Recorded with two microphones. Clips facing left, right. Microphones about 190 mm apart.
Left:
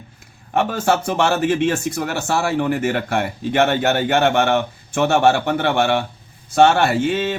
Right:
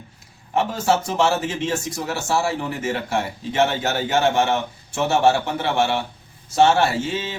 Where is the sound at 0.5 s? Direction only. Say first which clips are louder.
Left 2 dB; 60° left (ahead or behind).